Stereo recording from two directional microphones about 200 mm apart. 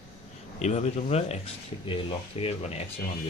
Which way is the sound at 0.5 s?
35° left (ahead or behind).